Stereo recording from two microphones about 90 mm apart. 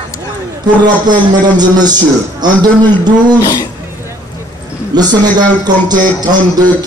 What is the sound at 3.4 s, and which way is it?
Speech, 50° left (ahead or behind).